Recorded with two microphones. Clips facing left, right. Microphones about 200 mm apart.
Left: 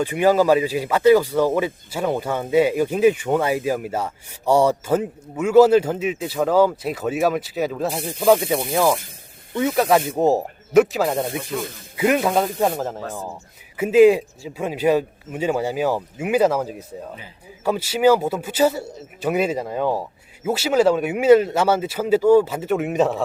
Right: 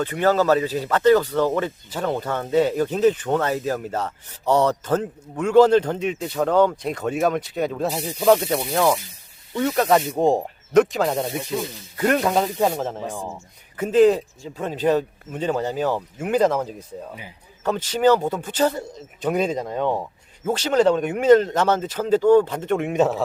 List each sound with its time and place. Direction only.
0.0 s speech: 10° left (ahead or behind)
8.4 s speech: 15° left (ahead or behind)
8.7 s speech: centre (ahead or behind)
11.6 s speech: 50° left (ahead or behind)
11.9 s speech: 5° left (ahead or behind)